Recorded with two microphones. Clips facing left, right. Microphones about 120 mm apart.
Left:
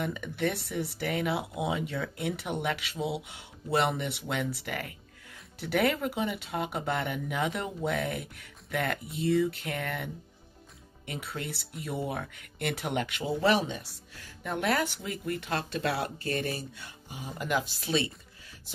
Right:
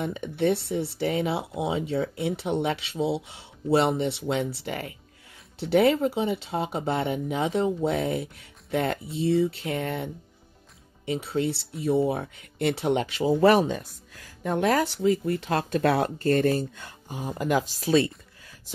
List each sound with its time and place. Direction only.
0.0 s speech: 25° right (ahead or behind)
13.3 s speech: 45° right (ahead or behind)